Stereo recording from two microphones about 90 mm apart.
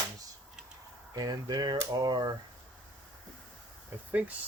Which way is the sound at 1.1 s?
45° right (ahead or behind).